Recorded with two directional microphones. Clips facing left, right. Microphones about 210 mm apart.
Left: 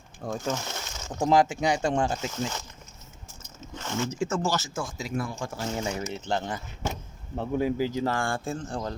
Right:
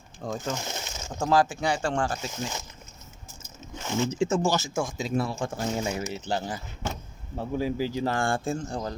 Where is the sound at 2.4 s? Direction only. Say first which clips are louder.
Left 2 dB; 10° right (ahead or behind).